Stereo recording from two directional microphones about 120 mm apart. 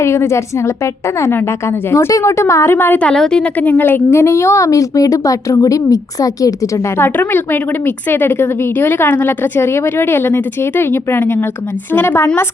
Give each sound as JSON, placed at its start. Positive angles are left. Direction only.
{"t": 0.0, "sound": "a woman's voice", "side_deg": 25}
{"t": 1.9, "sound": "a woman's voice", "side_deg": 25}
{"t": 7.0, "sound": "a woman's voice", "side_deg": 15}